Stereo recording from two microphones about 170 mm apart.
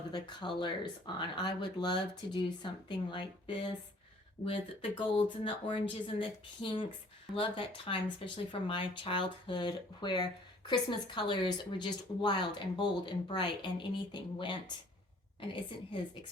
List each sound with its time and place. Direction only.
0.1 s speech: 25° left (ahead or behind)